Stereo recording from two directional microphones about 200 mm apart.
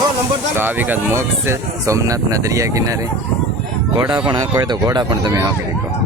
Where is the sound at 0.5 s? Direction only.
10° right (ahead or behind).